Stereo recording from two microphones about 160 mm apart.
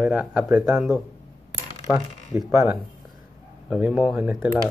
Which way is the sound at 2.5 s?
15° right (ahead or behind).